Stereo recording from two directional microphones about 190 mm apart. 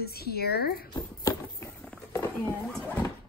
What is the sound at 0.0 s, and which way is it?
Speech, 55° left (ahead or behind).